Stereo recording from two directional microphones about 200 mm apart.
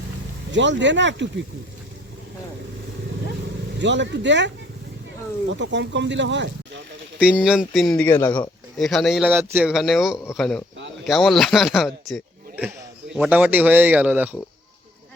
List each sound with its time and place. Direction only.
0.5 s speech: 65° right (ahead or behind)
3.8 s speech: 65° right (ahead or behind)
7.2 s a man's voice: 5° right (ahead or behind)